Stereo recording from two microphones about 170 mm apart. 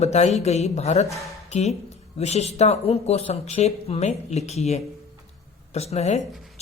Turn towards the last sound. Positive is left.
turn(degrees=40)  # may be behind; listen again after turning